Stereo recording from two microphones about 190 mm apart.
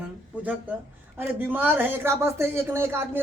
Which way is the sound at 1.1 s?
10° right (ahead or behind).